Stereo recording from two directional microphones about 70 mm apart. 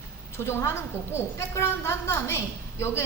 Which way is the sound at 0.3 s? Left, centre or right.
Left.